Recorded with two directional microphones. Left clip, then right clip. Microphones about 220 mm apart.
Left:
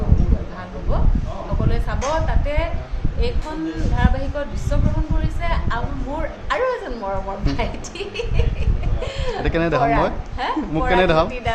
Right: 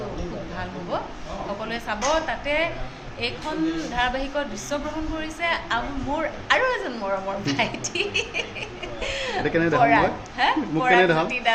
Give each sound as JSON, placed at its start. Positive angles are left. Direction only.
{"t": 1.7, "sound": "speech", "side_deg": 10}
{"t": 3.9, "sound": "speech", "side_deg": 5}
{"t": 9.4, "sound": "speech", "side_deg": 40}
{"t": 9.8, "sound": "speech", "side_deg": 10}
{"t": 11.0, "sound": "speech", "side_deg": 40}